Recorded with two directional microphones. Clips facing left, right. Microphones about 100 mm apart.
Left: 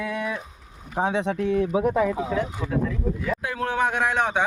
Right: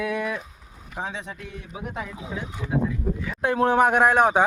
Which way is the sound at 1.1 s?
70° left (ahead or behind).